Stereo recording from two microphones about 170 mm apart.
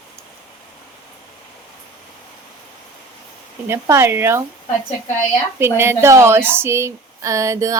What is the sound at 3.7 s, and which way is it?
Speech, 15° right (ahead or behind).